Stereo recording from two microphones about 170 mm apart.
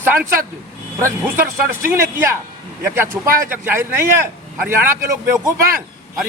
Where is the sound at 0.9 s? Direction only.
15° right (ahead or behind).